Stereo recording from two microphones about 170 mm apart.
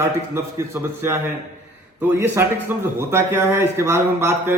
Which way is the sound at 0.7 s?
15° right (ahead or behind).